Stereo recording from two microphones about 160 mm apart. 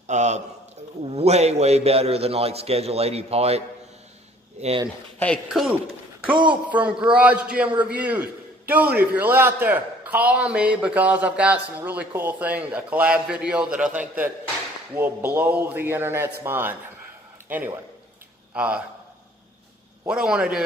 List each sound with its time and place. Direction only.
0.0 s a man's voice: 45° right (ahead or behind)
5.2 s a man's voice: 5° left (ahead or behind)
20.1 s a man's voice: 5° right (ahead or behind)